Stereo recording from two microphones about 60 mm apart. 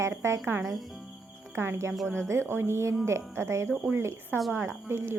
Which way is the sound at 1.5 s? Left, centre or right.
Right.